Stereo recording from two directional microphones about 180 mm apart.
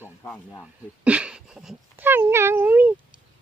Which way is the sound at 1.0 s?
5° right (ahead or behind).